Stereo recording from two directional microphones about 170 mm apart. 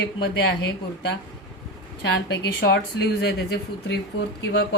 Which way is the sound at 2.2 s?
85° left.